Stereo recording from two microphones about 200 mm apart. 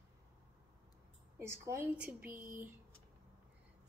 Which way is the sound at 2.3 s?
45° right (ahead or behind).